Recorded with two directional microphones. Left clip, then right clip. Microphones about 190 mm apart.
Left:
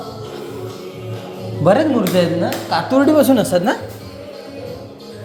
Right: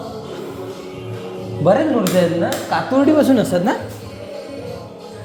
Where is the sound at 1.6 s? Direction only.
20° left (ahead or behind).